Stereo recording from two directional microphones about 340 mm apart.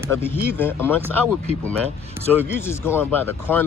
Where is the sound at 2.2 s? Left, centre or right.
Centre.